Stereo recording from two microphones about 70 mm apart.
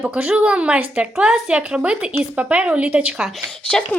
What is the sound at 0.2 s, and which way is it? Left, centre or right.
A woman's voice, centre.